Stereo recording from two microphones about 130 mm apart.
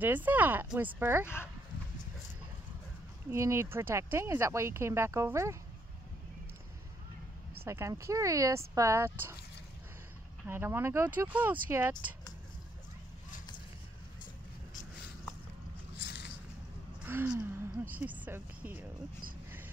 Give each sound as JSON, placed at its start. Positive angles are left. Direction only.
{"t": 0.0, "sound": "speech", "side_deg": -15}
{"t": 1.2, "sound": "speech", "side_deg": 20}
{"t": 3.3, "sound": "speech", "side_deg": -25}
{"t": 7.6, "sound": "speech", "side_deg": -20}
{"t": 10.4, "sound": "speech", "side_deg": -15}
{"t": 17.0, "sound": "a woman's voice", "side_deg": -15}